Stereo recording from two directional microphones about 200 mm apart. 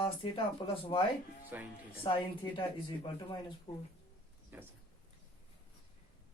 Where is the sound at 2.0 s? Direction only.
25° left (ahead or behind).